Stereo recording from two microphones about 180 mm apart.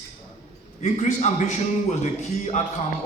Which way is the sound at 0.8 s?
40° left (ahead or behind).